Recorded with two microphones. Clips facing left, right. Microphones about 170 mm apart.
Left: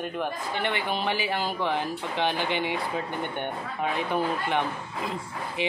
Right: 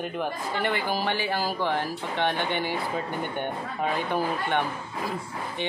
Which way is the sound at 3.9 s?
Centre (ahead or behind).